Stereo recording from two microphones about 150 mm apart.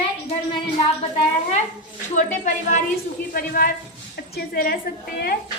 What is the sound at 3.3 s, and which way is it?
Speech, 75° left (ahead or behind).